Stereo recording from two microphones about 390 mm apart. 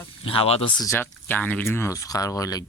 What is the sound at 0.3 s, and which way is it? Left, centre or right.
Speech, centre.